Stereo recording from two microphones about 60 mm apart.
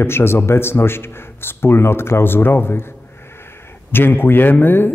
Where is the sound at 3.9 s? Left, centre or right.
Left.